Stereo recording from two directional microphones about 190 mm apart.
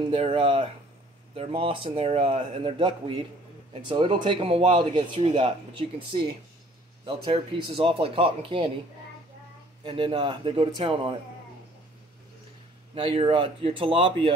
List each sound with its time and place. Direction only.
0.1 s speech: 30° right (ahead or behind)
9.8 s speech: 25° right (ahead or behind)
12.9 s speech: 30° right (ahead or behind)